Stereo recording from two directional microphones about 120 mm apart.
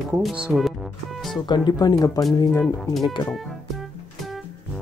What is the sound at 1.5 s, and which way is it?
Speech, 35° left (ahead or behind).